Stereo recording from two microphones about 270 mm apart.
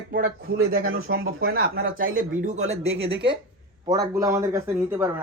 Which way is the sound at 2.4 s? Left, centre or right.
Right.